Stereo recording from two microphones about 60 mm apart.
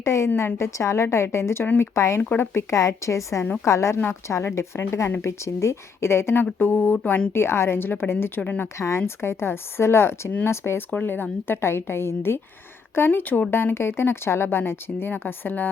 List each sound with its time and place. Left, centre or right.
0.0 s a woman's voice: left
0.3 s a woman's voice: left
2.3 s speech: left
2.7 s a woman's voice: left
7.3 s speech: left
8.8 s speech: left
10.9 s speech: left
13.5 s speech: left